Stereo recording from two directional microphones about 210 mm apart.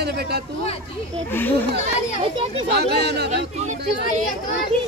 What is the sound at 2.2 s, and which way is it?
Speech, 25° right (ahead or behind).